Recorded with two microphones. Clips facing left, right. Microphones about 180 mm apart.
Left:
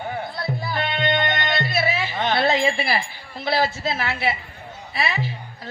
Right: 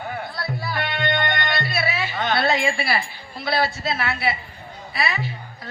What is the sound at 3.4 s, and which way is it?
A woman's voice, 25° left (ahead or behind).